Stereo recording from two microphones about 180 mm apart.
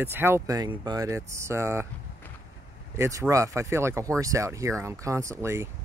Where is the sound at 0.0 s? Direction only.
10° right (ahead or behind).